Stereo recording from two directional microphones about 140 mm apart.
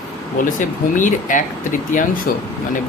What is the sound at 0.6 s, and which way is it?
Speech, 65° left (ahead or behind).